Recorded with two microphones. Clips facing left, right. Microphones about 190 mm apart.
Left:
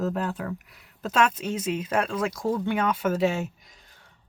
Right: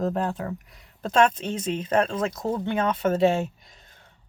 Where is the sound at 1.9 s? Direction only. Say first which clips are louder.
Right 5 dB; 25° right (ahead or behind).